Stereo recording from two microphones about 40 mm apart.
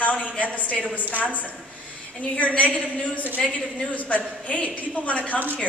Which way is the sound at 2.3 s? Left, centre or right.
Left.